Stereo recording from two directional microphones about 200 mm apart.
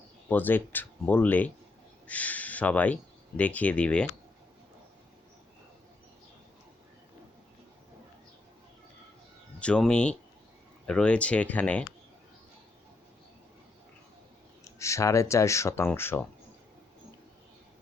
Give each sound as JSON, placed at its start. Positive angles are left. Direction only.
{"t": 0.3, "sound": "speech", "side_deg": 10}
{"t": 9.6, "sound": "speech", "side_deg": 5}
{"t": 14.6, "sound": "speech", "side_deg": 15}